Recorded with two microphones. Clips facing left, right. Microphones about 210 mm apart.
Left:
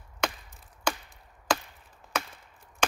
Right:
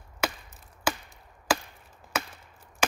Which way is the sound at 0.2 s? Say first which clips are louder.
Right 1 dB; 5° right (ahead or behind).